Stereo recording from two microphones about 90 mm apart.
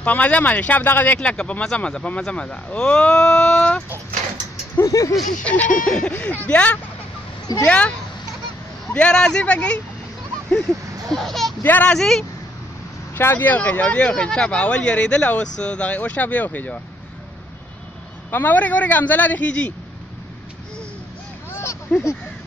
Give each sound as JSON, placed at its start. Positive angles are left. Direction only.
{"t": 0.0, "sound": "speech", "side_deg": 15}
{"t": 4.7, "sound": "speech", "side_deg": 35}
{"t": 5.4, "sound": "speech", "side_deg": 15}
{"t": 8.9, "sound": "speech", "side_deg": 10}
{"t": 11.6, "sound": "speech", "side_deg": 20}
{"t": 12.0, "sound": "speech", "side_deg": 5}
{"t": 13.1, "sound": "speech", "side_deg": 25}
{"t": 18.3, "sound": "speech", "side_deg": 20}
{"t": 21.5, "sound": "a sound", "side_deg": 25}